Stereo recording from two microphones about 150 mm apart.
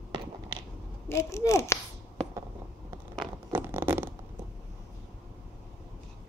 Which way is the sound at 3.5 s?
15° right (ahead or behind).